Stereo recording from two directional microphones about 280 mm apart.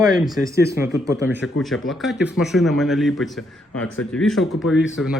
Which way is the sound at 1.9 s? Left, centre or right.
Centre.